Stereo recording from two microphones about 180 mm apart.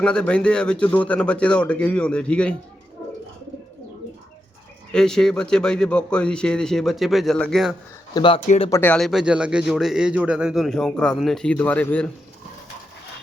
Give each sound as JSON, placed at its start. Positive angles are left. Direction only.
{"t": 0.0, "sound": "a man's voice", "side_deg": 5}
{"t": 4.9, "sound": "a man's voice", "side_deg": 5}
{"t": 8.1, "sound": "speech", "side_deg": 25}
{"t": 8.7, "sound": "a man's voice", "side_deg": 10}